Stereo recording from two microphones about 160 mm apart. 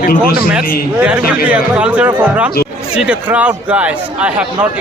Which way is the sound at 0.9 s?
10° right (ahead or behind).